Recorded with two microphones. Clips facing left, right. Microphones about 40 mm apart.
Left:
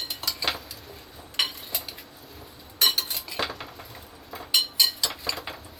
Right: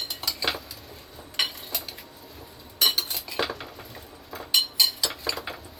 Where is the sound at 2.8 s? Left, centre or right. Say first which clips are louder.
Even; centre.